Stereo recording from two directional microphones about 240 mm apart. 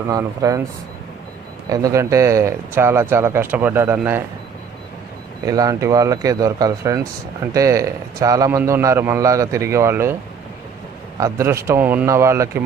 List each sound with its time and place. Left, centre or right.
0.1 s a man's voice: centre
1.7 s a man's voice: centre
5.5 s a man's voice: centre
11.2 s a man's voice: centre